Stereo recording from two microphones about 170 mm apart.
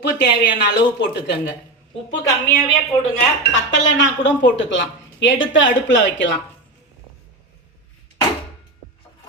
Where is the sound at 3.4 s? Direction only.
90° left.